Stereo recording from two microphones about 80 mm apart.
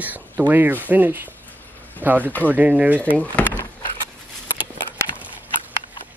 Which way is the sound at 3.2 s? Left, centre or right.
Left.